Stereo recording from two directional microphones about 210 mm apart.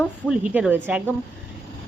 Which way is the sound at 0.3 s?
5° right (ahead or behind).